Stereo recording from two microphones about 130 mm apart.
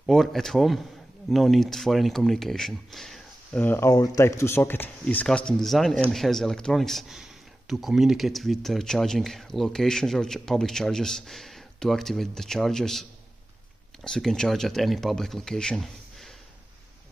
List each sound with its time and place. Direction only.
0.0 s speech: centre (ahead or behind)
3.6 s speech: 15° left (ahead or behind)
3.9 s speech: 30° left (ahead or behind); by 13.0 s 5° left (ahead or behind)
14.0 s speech: 5° left (ahead or behind)